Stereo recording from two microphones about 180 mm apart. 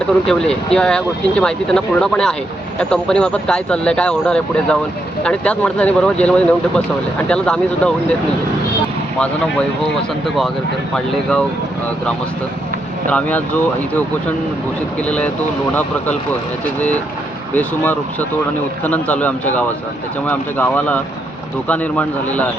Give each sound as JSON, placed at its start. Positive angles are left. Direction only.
{"t": 0.0, "sound": "speech", "side_deg": 5}
{"t": 9.1, "sound": "speech", "side_deg": 5}
{"t": 13.1, "sound": "speech", "side_deg": 10}
{"t": 15.0, "sound": "speech", "side_deg": 5}
{"t": 17.5, "sound": "speech", "side_deg": 10}